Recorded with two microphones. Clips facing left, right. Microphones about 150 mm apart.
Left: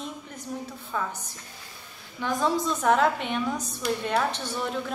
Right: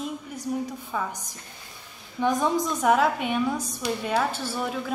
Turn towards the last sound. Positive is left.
turn(degrees=-5)  # may be behind; listen again after turning